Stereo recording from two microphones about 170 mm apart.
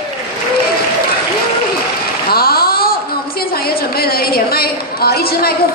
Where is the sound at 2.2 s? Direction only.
65° left (ahead or behind).